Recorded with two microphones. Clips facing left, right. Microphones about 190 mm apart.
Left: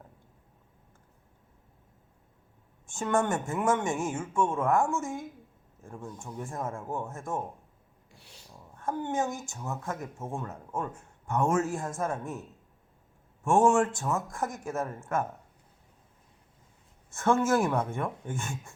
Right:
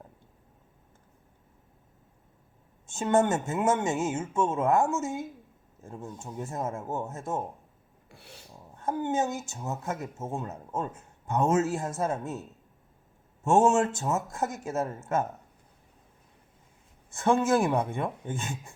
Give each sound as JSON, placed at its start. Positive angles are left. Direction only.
{"t": 2.8, "sound": "speech", "side_deg": -20}
{"t": 8.1, "sound": "filing", "side_deg": -55}
{"t": 8.7, "sound": "speech", "side_deg": -20}
{"t": 13.4, "sound": "speech", "side_deg": -25}
{"t": 17.1, "sound": "speech", "side_deg": -15}